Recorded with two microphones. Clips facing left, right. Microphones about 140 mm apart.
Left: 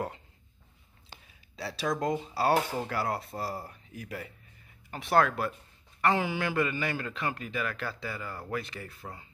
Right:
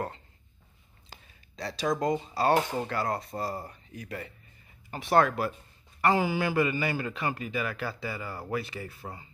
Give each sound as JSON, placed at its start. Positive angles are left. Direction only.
{"t": 1.6, "sound": "a man's voice", "side_deg": 5}